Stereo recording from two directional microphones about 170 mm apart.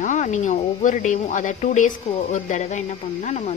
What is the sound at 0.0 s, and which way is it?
A woman's voice, 45° left (ahead or behind).